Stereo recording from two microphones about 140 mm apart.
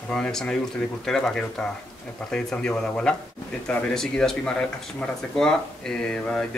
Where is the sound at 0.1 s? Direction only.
5° left (ahead or behind).